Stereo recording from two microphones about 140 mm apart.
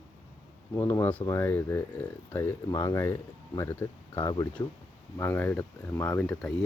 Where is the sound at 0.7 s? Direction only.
15° left (ahead or behind).